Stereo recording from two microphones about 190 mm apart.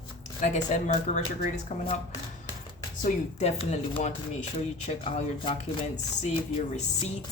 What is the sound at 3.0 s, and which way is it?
Speech, 35° left (ahead or behind).